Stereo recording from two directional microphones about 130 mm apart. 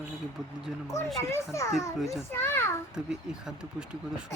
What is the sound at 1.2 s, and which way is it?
Speech, 20° left (ahead or behind).